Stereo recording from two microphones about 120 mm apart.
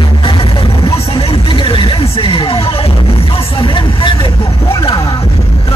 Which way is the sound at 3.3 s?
50° left (ahead or behind).